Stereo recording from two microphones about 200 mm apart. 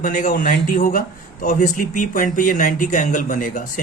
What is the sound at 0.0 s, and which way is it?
A man's voice, 40° left (ahead or behind).